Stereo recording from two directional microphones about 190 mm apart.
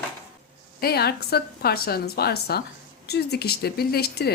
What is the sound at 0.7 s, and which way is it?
A woman's voice, 55° left (ahead or behind).